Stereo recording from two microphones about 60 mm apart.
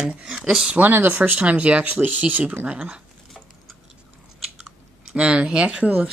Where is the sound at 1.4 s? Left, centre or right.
Right.